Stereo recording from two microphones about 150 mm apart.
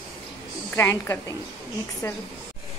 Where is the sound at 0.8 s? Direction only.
20° left (ahead or behind).